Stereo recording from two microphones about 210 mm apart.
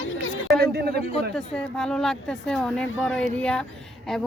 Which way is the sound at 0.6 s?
50° right (ahead or behind).